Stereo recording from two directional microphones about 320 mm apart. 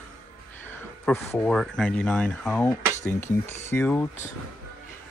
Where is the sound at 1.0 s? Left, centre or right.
Centre.